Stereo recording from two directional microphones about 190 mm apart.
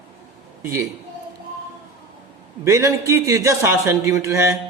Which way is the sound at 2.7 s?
15° right (ahead or behind).